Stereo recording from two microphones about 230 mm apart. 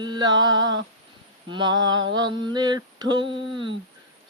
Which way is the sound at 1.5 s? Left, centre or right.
Centre.